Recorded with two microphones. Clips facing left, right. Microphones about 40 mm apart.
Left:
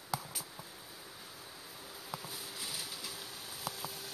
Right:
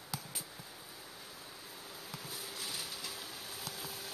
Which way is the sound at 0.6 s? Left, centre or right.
Centre.